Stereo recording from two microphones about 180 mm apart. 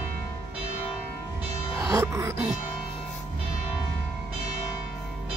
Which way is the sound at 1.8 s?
15° right (ahead or behind).